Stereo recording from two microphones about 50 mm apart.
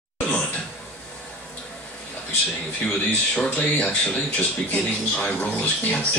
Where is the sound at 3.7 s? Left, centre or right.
Left.